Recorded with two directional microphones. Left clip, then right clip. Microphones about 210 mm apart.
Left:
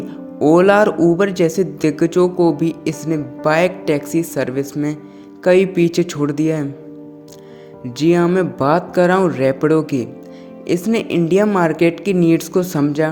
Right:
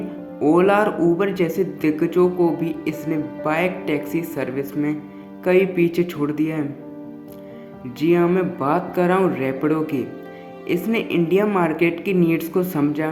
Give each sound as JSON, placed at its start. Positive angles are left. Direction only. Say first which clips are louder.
{"t": 0.3, "sound": "speech", "louder": "left 5 dB", "side_deg": 40}
{"t": 7.9, "sound": "speech", "louder": "left 3 dB", "side_deg": 40}